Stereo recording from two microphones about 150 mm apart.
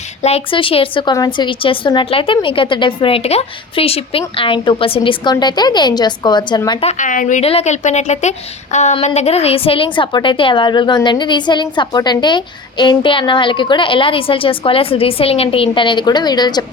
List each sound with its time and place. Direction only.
0.2 s a woman's voice: 45° left (ahead or behind)
6.8 s a woman's voice: 60° left (ahead or behind)
7.4 s a woman's voice: 45° left (ahead or behind); by 16.6 s 30° left (ahead or behind)